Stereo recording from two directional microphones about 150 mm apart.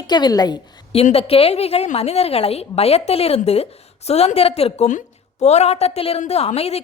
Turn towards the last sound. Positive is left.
turn(degrees=45)  # may be behind; listen again after turning